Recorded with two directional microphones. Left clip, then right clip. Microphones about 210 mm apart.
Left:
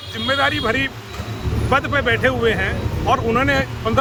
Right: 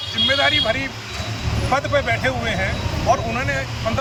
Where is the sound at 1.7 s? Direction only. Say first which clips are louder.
Left 2 dB; 20° left (ahead or behind).